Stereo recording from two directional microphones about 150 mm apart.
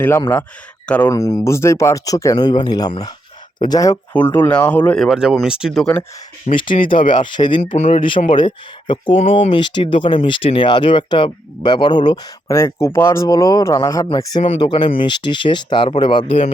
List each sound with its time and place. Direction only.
0.9 s speech: 10° left (ahead or behind)
1.1 s speech: 25° left (ahead or behind)
4.1 s speech: 10° left (ahead or behind)
5.0 s speech: 5° right (ahead or behind)
6.5 s speech: 55° left (ahead or behind)
7.3 s speech: 30° left (ahead or behind)
7.8 s speech: 50° left (ahead or behind)
8.3 s speech: 35° left (ahead or behind)